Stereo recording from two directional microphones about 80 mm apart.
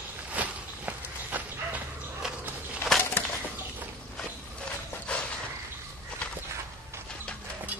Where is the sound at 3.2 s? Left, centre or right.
Left.